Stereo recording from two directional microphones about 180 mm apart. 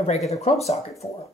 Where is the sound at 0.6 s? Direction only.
35° left (ahead or behind).